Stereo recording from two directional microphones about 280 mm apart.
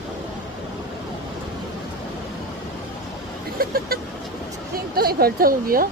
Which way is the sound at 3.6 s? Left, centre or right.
Right.